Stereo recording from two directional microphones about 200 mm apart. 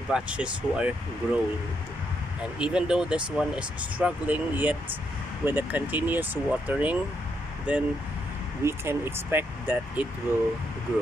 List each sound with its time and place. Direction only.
0.1 s speech: 5° right (ahead or behind)
2.6 s speech: 5° right (ahead or behind)